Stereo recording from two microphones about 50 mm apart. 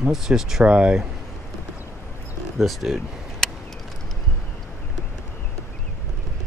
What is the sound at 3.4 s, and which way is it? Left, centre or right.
Vehicle, centre.